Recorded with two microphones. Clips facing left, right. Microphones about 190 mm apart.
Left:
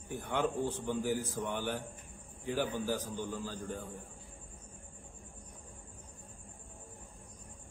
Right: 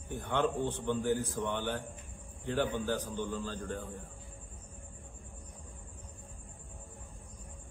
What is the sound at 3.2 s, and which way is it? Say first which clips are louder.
Speech: right 2 dB; 15° left (ahead or behind).